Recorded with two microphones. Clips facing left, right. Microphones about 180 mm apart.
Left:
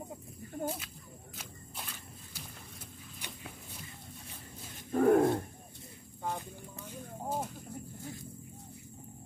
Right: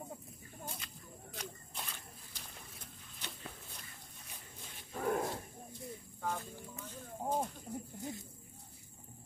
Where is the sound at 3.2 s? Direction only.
10° left (ahead or behind).